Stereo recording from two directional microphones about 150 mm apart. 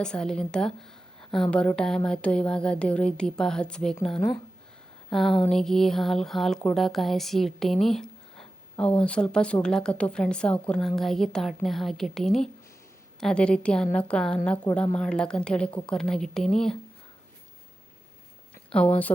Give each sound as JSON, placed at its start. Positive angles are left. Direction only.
{"t": 0.0, "sound": "a woman's voice", "side_deg": 5}
{"t": 18.7, "sound": "a woman's voice", "side_deg": 5}